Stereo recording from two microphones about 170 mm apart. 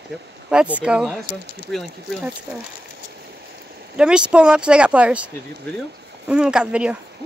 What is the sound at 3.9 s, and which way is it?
Speech, 5° right (ahead or behind).